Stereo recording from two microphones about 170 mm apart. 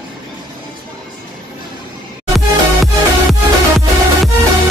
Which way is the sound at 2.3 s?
Centre (ahead or behind).